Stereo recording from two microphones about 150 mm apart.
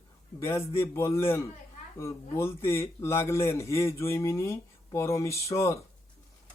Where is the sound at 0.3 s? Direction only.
20° left (ahead or behind).